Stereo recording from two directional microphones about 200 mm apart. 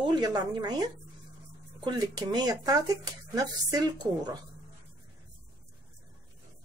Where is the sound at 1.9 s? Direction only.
20° right (ahead or behind).